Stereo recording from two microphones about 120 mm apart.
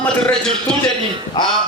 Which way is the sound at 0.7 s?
5° left (ahead or behind).